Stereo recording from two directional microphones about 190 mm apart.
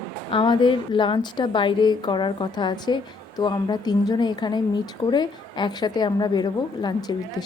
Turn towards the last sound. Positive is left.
turn(degrees=20)  # may be behind; listen again after turning